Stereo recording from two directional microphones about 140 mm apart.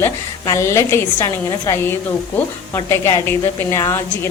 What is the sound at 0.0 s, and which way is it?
A woman's voice, 20° left (ahead or behind).